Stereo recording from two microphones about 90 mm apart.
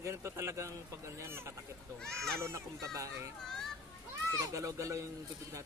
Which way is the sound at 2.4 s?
35° right (ahead or behind).